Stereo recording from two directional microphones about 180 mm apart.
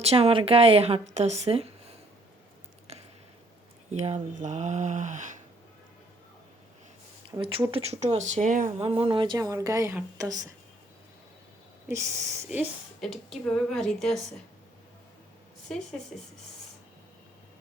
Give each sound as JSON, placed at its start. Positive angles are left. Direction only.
{"t": 0.0, "sound": "speech", "side_deg": -35}
{"t": 3.9, "sound": "speech", "side_deg": -40}
{"t": 7.3, "sound": "speech", "side_deg": -30}
{"t": 8.8, "sound": "speech", "side_deg": -30}
{"t": 11.9, "sound": "speech", "side_deg": -15}
{"t": 12.5, "sound": "a woman's voice", "side_deg": 0}